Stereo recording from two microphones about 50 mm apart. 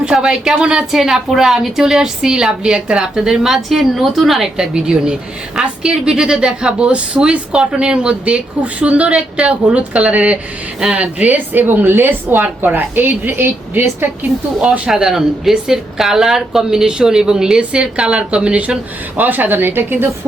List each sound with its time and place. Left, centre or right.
0.1 s speech: centre
4.5 s a woman's voice: centre; by 13.8 s right
14.8 s a woman's voice: centre; by 20.1 s right